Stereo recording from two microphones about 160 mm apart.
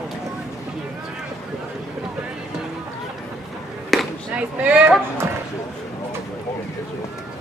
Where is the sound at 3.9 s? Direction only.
10° right (ahead or behind).